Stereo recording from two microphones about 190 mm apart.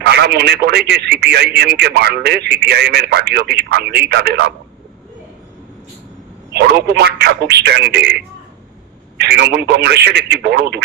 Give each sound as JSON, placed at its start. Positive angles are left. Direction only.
{"t": 0.0, "sound": "speech", "side_deg": -55}
{"t": 6.5, "sound": "speech", "side_deg": -60}
{"t": 9.2, "sound": "speech", "side_deg": -60}